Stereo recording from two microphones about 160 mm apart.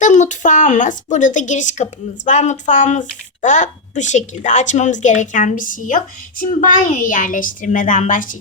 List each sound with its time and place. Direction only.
0.0 s a woman's voice: 50° left (ahead or behind)